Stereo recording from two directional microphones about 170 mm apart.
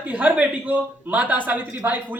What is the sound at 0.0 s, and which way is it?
Speech, 10° right (ahead or behind).